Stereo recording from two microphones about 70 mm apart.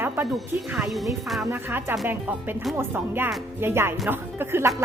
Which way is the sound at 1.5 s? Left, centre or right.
Right.